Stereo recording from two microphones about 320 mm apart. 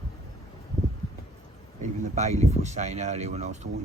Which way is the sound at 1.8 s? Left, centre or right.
Right.